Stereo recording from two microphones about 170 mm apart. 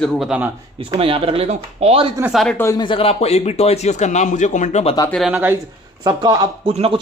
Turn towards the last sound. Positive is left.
turn(degrees=-35)  # may be behind; listen again after turning